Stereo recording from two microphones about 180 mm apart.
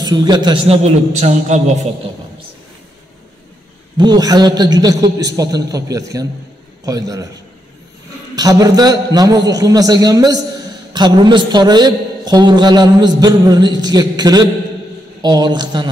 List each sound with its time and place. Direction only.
0.0 s a man's voice: 20° right (ahead or behind)
0.8 s a man's voice: 40° right (ahead or behind)
4.0 s a man's voice: 20° right (ahead or behind)
8.4 s a man's voice: 20° right (ahead or behind)